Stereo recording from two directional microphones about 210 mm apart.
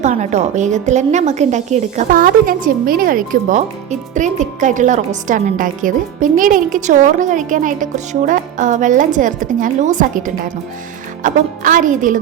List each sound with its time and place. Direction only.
0.0 s a woman's voice: 35° right (ahead or behind)